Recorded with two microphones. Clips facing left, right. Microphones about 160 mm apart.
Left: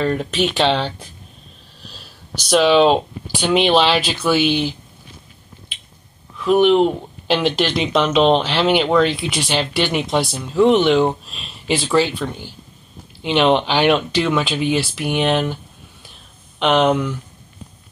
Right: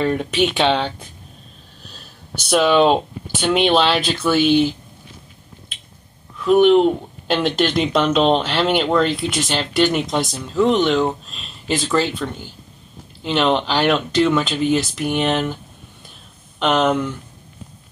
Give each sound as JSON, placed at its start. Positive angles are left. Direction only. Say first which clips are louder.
{"t": 0.0, "sound": "speech", "louder": "even", "side_deg": 0}
{"t": 0.8, "sound": "speech", "louder": "even", "side_deg": -55}
{"t": 2.5, "sound": "speech", "louder": "left 1 dB", "side_deg": 0}
{"t": 6.4, "sound": "speech", "louder": "right 1 dB", "side_deg": 0}
{"t": 16.5, "sound": "speech", "louder": "left 2 dB", "side_deg": 0}